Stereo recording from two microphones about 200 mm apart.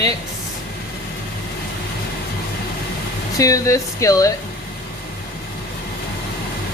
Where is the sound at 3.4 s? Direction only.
15° left (ahead or behind).